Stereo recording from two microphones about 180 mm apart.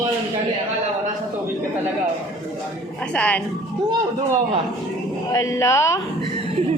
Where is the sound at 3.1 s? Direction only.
5° left (ahead or behind).